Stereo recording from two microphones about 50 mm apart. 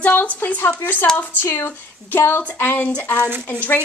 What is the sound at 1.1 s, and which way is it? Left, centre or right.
A woman's voice, left.